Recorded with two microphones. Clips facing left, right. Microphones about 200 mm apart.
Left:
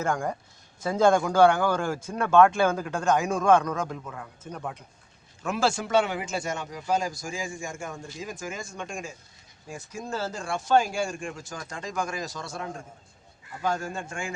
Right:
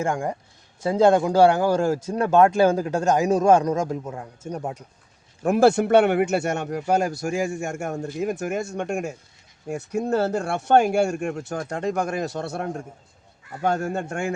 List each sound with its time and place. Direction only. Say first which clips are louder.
0.0 s speech: right 3 dB; 20° right (ahead or behind)
0.8 s a man's voice: right 4 dB; 30° right (ahead or behind)
5.4 s a man's voice: right 10 dB; 55° right (ahead or behind)